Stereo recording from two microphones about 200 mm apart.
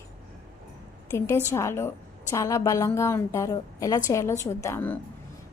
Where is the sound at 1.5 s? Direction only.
15° left (ahead or behind).